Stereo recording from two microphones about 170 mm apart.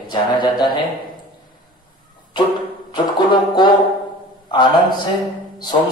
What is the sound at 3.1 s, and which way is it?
Speech, 25° left (ahead or behind).